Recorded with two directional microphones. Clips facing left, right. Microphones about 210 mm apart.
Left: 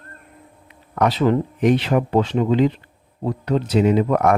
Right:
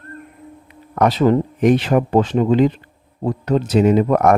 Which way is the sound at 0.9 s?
45° right (ahead or behind).